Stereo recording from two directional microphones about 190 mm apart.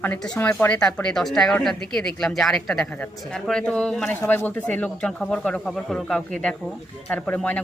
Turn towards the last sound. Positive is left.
turn(degrees=5)  # may be behind; listen again after turning